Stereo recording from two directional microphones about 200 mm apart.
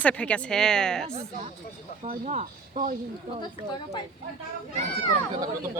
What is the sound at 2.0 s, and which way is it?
Speech, 35° right (ahead or behind).